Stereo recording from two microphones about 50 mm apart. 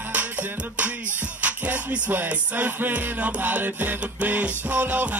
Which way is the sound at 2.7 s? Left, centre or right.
Right.